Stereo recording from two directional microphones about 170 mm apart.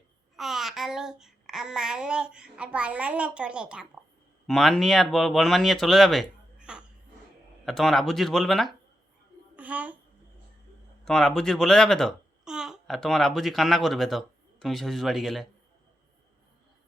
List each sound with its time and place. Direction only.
0.3 s child singing: centre (ahead or behind)
4.4 s speech: centre (ahead or behind)
9.6 s a sound: 10° right (ahead or behind)
11.0 s a child's voice: centre (ahead or behind)